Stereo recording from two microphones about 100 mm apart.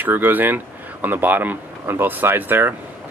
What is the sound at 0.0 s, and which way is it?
Speech, 20° right (ahead or behind).